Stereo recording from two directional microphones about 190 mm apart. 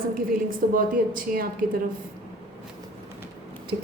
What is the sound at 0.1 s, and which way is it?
A woman's voice, 50° right (ahead or behind).